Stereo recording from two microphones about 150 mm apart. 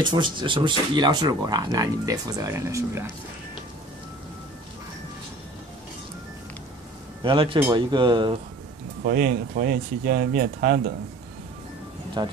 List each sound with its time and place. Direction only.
0.0 s speech: 30° right (ahead or behind)
7.2 s speech: 35° right (ahead or behind)
9.0 s speech: 70° right (ahead or behind)
12.2 s speech: 30° right (ahead or behind)